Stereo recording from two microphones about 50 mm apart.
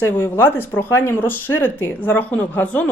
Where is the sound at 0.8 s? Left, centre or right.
Left.